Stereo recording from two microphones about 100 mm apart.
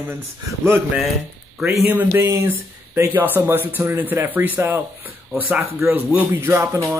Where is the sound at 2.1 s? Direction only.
30° right (ahead or behind).